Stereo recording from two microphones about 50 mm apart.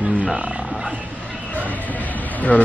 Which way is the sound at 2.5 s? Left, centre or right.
Left.